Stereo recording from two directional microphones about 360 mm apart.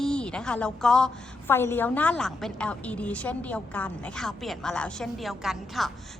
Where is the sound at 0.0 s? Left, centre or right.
Centre.